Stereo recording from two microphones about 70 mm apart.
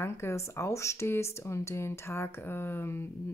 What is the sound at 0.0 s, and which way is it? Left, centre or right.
A woman's voice, left.